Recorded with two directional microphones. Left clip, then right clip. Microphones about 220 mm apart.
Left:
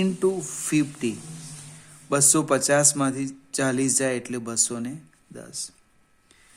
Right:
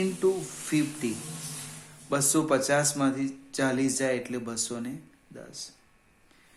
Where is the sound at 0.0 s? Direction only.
45° left (ahead or behind).